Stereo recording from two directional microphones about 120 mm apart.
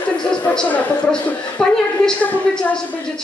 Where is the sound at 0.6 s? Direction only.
10° left (ahead or behind).